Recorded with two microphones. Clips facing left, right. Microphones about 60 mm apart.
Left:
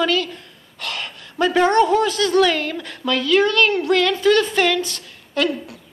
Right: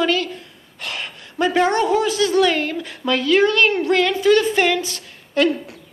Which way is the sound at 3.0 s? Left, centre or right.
Right.